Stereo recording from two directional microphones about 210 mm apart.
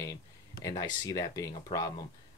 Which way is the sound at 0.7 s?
15° left (ahead or behind).